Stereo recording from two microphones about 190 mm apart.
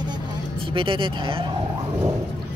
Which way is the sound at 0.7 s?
25° right (ahead or behind).